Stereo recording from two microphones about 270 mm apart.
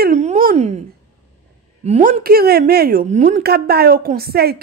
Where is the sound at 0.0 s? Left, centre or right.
Right.